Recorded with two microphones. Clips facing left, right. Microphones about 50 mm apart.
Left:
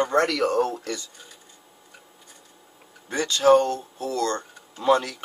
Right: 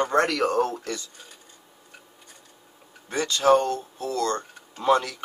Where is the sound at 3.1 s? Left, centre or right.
Right.